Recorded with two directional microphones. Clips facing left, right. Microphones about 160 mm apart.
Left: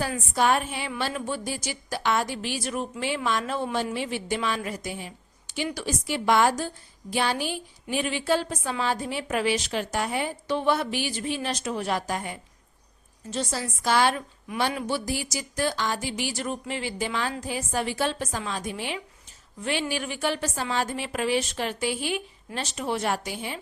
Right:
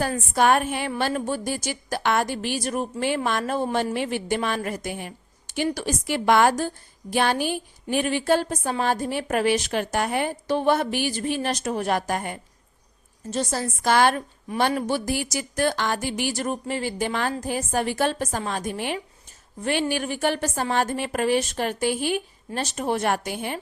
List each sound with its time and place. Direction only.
0.0 s a woman's voice: 50° right (ahead or behind)